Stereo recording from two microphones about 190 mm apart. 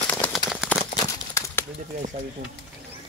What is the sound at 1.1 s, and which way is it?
Crumpling, 15° left (ahead or behind).